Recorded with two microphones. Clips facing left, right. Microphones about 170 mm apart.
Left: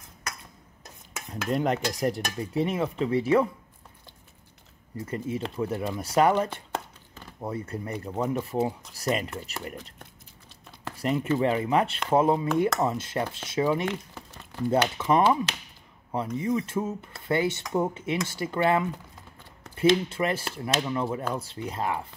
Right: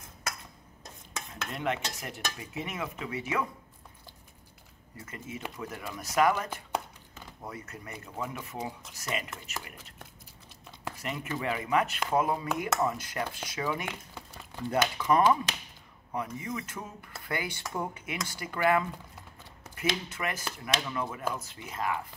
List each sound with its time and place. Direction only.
1.5 s speech: 35° left (ahead or behind)
4.9 s speech: 35° left (ahead or behind)
11.0 s speech: 30° left (ahead or behind)